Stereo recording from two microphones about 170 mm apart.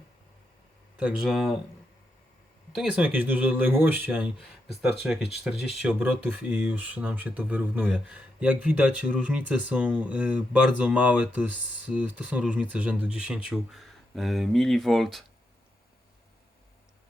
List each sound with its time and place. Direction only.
0.9 s speech: 5° right (ahead or behind)
2.7 s speech: 5° right (ahead or behind)